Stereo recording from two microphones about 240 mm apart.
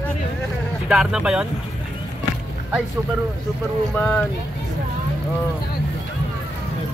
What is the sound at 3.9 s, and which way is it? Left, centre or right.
Speech, centre.